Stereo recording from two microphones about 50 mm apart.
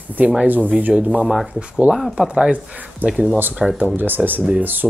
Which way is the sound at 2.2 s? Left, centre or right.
Centre.